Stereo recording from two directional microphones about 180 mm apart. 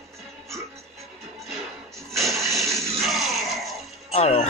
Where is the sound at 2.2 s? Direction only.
15° right (ahead or behind).